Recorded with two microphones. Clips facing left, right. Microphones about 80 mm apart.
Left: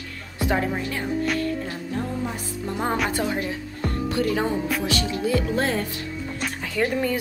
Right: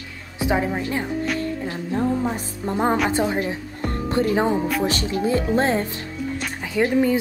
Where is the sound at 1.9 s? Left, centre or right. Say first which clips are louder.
Right 7 dB; right.